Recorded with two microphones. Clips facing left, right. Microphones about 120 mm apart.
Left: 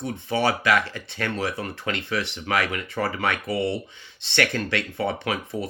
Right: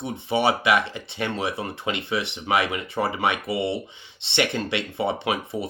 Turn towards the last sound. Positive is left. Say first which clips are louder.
# right 1 dB
turn(degrees=-20)  # may be behind; listen again after turning